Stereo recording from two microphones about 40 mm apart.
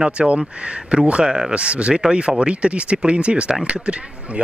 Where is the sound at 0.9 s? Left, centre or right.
Right.